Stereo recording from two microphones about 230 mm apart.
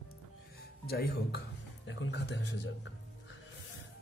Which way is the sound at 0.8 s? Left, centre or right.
Left.